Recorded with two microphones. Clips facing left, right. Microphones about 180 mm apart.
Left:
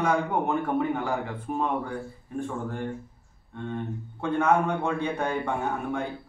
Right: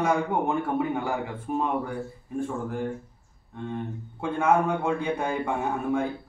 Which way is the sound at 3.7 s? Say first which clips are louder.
Left 1 dB; 10° right (ahead or behind).